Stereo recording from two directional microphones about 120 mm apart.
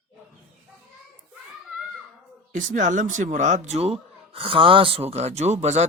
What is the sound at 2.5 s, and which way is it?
A man's voice, 90° right.